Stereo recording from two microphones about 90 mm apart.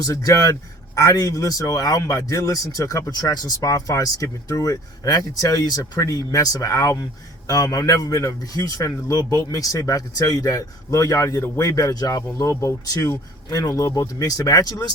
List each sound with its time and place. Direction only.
0.0 s a man's voice: 40° left (ahead or behind)
11.7 s speech: 40° left (ahead or behind)
12.5 s a man's voice: 30° left (ahead or behind)
12.8 s speech: 45° left (ahead or behind)